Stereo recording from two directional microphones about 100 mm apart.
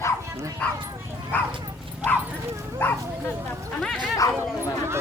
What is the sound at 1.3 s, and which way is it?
Speech, 15° left (ahead or behind).